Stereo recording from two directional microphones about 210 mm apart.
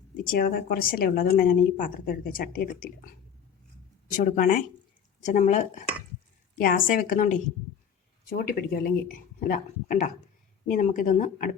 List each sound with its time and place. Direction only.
0.3 s a woman's voice: 45° left (ahead or behind)
4.1 s a woman's voice: 35° left (ahead or behind)